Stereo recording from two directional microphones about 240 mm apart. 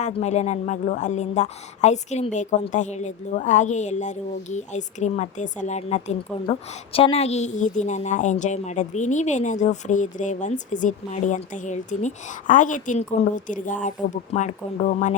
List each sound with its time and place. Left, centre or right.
0.0 s speech: left